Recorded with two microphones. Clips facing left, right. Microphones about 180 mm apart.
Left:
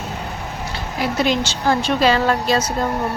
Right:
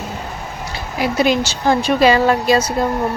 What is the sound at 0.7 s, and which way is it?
Speech, 10° right (ahead or behind).